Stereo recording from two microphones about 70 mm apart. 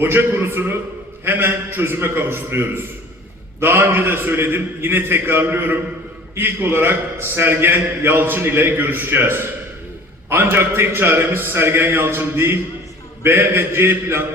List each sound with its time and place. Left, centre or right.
0.0 s a man's voice: right